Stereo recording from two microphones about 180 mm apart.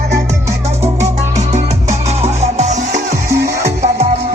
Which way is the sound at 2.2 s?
35° right (ahead or behind).